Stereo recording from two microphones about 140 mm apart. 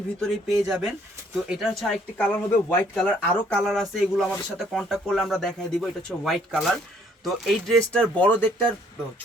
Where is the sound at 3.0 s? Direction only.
10° left (ahead or behind).